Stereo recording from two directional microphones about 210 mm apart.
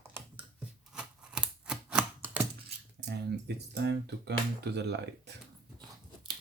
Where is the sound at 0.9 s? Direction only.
5° right (ahead or behind).